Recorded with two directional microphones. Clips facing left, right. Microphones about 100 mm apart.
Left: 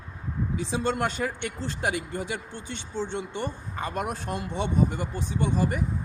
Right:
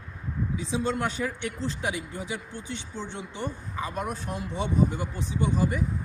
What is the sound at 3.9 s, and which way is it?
Speech, 85° left.